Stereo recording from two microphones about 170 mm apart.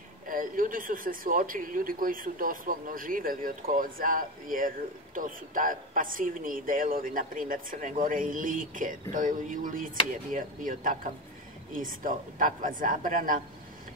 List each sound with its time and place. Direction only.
0.3 s speech: 55° right (ahead or behind)